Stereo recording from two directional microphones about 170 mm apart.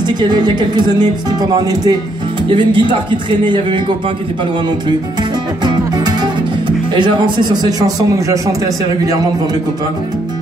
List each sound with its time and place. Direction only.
0.0 s speech: 25° right (ahead or behind)
5.6 s music: 25° right (ahead or behind)
6.9 s speech: 25° right (ahead or behind)